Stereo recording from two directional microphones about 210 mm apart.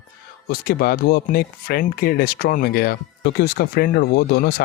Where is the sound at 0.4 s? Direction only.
45° left (ahead or behind).